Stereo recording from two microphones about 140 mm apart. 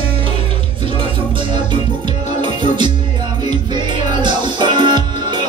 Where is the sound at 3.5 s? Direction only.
30° right (ahead or behind).